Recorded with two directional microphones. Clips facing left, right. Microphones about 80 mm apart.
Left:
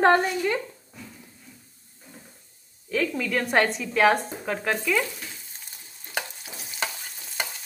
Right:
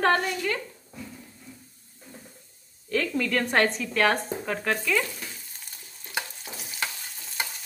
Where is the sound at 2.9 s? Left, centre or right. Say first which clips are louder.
Even; centre.